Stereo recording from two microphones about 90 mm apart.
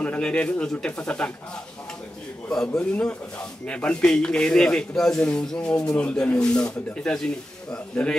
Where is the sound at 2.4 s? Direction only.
5° left (ahead or behind).